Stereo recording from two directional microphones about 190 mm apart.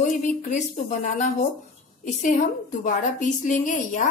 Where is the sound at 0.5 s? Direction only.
40° left (ahead or behind).